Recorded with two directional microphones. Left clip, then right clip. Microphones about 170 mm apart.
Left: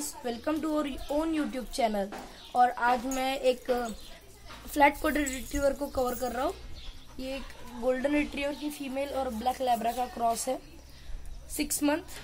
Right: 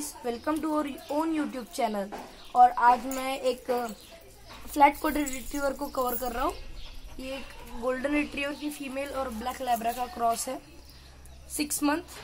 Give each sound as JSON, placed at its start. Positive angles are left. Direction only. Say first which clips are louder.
{"t": 0.2, "sound": "a woman's voice", "louder": "right 2 dB", "side_deg": 35}
{"t": 7.8, "sound": "speech", "louder": "left 1 dB", "side_deg": 25}